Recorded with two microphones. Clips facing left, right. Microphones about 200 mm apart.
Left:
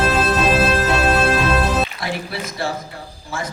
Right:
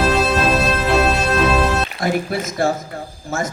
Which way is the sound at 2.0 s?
45° right (ahead or behind).